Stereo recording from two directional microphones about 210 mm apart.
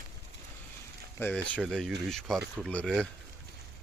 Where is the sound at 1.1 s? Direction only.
5° left (ahead or behind).